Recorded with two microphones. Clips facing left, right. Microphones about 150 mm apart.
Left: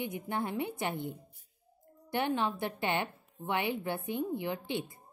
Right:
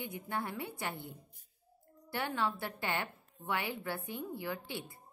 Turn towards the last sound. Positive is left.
turn(degrees=20)  # may be behind; listen again after turning